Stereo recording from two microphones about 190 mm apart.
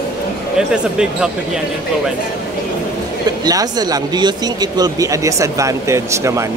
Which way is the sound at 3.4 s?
20° right (ahead or behind).